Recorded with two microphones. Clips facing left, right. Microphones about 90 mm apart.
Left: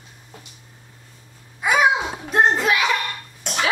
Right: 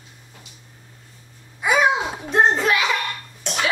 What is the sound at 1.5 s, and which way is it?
Babbling, centre (ahead or behind).